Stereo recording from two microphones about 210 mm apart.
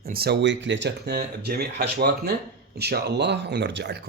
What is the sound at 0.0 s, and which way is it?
A man's voice, 45° right (ahead or behind).